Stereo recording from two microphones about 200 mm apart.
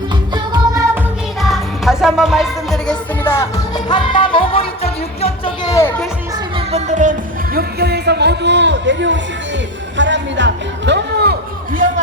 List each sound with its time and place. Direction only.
0.3 s music: 20° right (ahead or behind)
1.4 s music: centre (ahead or behind); by 5.7 s 30° left (ahead or behind)
6.7 s music: 35° right (ahead or behind)